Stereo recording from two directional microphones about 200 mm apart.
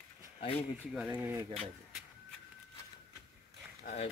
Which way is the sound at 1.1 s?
15° right (ahead or behind).